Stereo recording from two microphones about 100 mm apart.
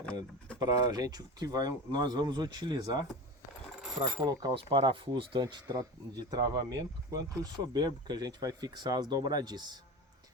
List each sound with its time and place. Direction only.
0.0 s a sound: 10° left (ahead or behind)
0.6 s speech: 40° right (ahead or behind)
3.8 s coin: centre (ahead or behind)
4.2 s speech: 35° right (ahead or behind)
4.5 s speech: 55° right (ahead or behind)